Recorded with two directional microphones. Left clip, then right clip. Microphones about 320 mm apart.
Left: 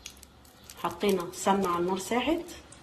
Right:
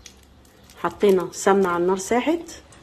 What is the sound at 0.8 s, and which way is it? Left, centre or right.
Speech, centre.